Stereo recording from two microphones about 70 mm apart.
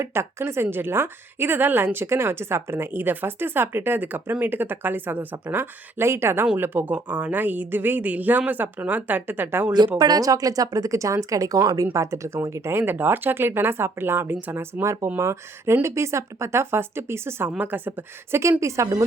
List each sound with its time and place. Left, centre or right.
0.0 s a woman's voice: right
10.0 s speech: right
11.9 s a woman's voice: right